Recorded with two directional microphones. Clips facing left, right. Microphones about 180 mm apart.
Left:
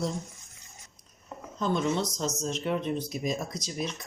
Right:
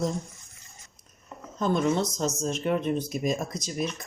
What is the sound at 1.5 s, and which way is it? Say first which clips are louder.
Speech: right 3 dB; 50° right (ahead or behind).